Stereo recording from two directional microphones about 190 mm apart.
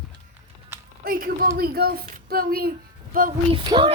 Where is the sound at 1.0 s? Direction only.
50° right (ahead or behind).